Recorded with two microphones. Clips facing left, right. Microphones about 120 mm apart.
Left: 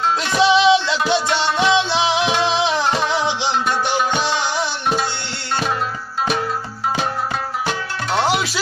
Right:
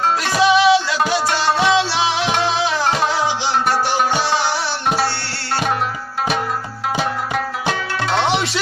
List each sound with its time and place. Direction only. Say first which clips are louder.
0.4 s music: even; 25° left (ahead or behind)
7.3 s music: right 2 dB; 75° right (ahead or behind)